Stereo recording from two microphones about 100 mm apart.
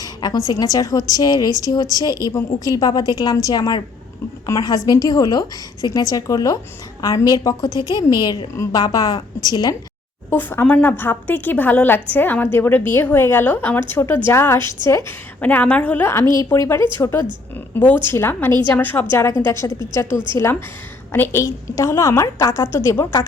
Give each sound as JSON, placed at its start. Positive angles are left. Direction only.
{"t": 0.0, "sound": "a woman's voice", "side_deg": 40}
{"t": 1.5, "sound": "speech", "side_deg": -35}
{"t": 2.0, "sound": "a woman's voice", "side_deg": 40}
{"t": 10.2, "sound": "speech", "side_deg": 20}
{"t": 15.4, "sound": "a woman's voice", "side_deg": 15}
{"t": 16.6, "sound": "a woman's voice", "side_deg": 25}